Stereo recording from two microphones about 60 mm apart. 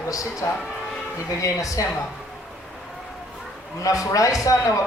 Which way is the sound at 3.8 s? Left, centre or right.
Left.